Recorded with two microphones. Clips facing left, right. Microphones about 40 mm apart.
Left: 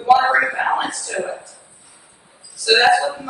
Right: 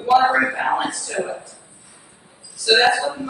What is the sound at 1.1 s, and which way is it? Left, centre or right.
Speech, centre.